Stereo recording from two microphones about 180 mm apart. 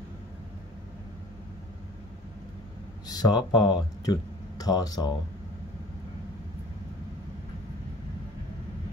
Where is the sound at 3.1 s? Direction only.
20° left (ahead or behind).